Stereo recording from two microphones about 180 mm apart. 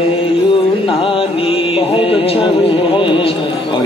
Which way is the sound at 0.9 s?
30° left (ahead or behind).